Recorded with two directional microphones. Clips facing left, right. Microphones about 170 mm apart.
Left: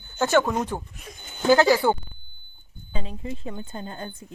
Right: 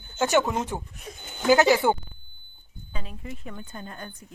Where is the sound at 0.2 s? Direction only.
20° right (ahead or behind).